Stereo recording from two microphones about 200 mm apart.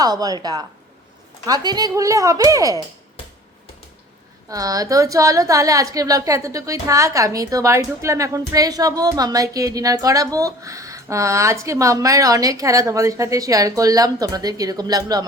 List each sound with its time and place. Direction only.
0.0 s a woman's voice: 20° right (ahead or behind)
4.4 s a woman's voice: 15° right (ahead or behind)